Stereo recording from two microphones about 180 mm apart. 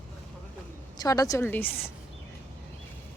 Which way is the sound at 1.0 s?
20° left (ahead or behind).